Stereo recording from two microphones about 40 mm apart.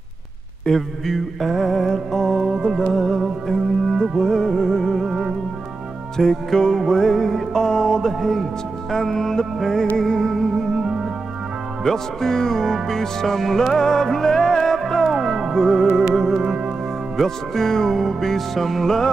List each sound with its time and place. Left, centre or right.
0.7 s music: centre
2.4 s music: centre
2.8 s music: centre
5.0 s music: centre
6.1 s music: centre
8.1 s speech: centre
8.9 s music: centre
11.8 s music: centre
15.0 s music: centre
16.4 s music: right
17.2 s music: centre